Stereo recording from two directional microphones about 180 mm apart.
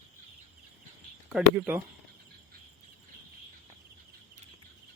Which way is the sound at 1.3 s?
5° right (ahead or behind).